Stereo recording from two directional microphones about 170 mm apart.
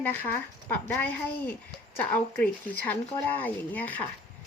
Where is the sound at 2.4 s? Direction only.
10° left (ahead or behind).